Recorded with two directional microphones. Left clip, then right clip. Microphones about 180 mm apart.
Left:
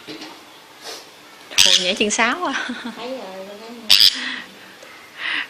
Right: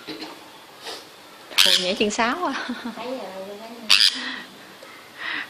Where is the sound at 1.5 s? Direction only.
40° right (ahead or behind).